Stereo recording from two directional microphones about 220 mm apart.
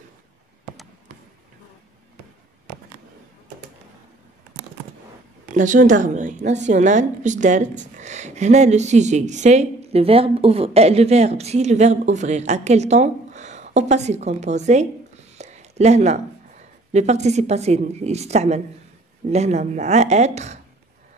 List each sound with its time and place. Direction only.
5.5 s a woman's voice: 35° right (ahead or behind)
15.3 s a sound: 30° right (ahead or behind)
16.9 s a woman's voice: 30° right (ahead or behind)